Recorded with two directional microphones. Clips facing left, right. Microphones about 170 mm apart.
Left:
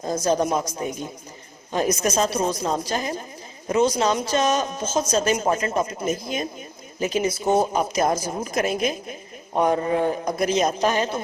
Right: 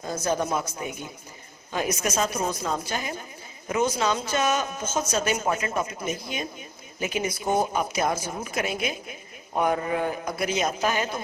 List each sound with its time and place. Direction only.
0.8 s a man's voice: 35° left (ahead or behind)
7.0 s a man's voice: 30° left (ahead or behind)
10.3 s a man's voice: 40° left (ahead or behind)